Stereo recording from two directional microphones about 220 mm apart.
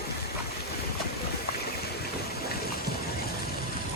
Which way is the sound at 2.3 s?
45° left (ahead or behind).